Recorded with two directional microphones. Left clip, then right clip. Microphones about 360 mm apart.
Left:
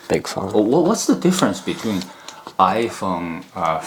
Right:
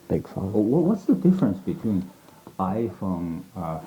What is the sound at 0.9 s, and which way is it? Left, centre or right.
Speech, centre.